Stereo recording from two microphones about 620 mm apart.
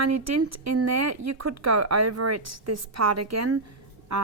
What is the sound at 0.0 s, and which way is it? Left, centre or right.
Speech, right.